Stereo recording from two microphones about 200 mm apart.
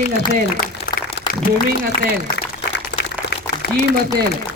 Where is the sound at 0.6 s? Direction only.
45° left (ahead or behind).